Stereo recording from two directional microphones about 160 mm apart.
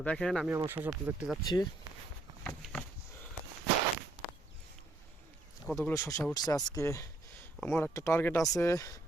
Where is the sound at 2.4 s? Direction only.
5° left (ahead or behind).